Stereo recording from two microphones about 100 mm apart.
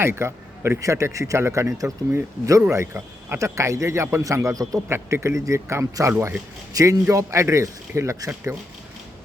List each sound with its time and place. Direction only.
0.0 s a man's voice: 25° right (ahead or behind)